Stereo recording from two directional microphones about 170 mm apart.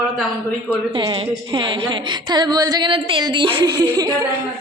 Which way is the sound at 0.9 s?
30° right (ahead or behind).